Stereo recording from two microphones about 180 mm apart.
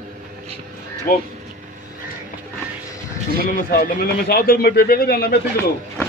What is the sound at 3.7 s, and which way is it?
A man's voice, 55° left (ahead or behind).